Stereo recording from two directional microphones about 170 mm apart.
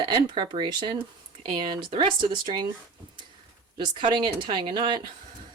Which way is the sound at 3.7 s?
25° right (ahead or behind).